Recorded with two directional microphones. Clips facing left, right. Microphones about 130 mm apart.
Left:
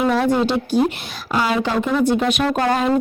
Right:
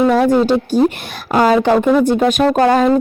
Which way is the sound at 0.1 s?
45° right (ahead or behind).